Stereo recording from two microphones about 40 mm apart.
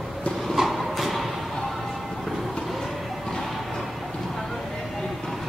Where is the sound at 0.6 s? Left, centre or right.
Centre.